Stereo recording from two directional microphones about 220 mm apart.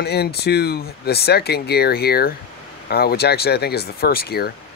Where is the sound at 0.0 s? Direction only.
45° left (ahead or behind).